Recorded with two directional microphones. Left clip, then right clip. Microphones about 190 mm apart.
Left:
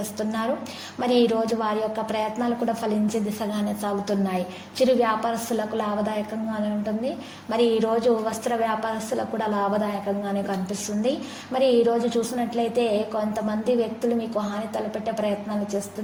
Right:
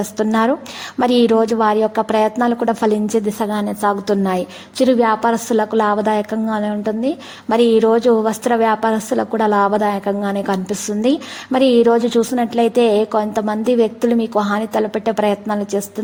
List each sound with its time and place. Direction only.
0.2 s a woman's voice: 45° right (ahead or behind)